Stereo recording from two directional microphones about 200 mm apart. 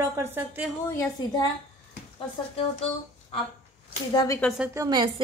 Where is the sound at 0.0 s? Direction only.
10° right (ahead or behind).